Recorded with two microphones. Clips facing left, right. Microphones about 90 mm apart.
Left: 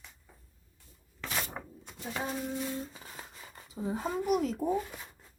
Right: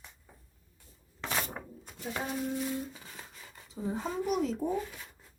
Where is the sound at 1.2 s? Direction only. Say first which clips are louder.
Right 2 dB; 30° right (ahead or behind).